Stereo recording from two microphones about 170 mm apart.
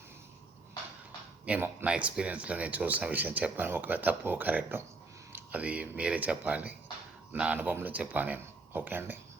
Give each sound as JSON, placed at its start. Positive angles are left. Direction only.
{"t": 1.5, "sound": "speech", "side_deg": -10}